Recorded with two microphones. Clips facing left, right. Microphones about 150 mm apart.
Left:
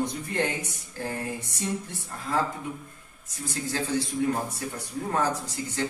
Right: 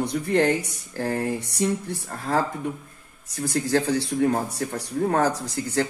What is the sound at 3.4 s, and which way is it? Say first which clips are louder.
A man's voice: right 8 dB; 80° right.